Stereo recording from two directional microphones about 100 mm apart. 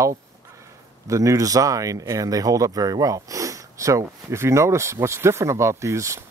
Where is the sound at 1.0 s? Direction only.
30° right (ahead or behind).